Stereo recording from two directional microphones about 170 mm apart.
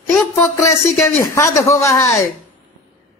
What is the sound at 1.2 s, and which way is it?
A woman's voice, 15° left (ahead or behind).